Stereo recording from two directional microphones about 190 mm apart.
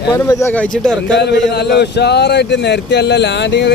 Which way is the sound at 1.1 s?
65° left (ahead or behind).